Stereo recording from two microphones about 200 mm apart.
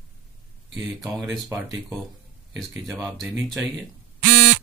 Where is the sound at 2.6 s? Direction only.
Centre (ahead or behind).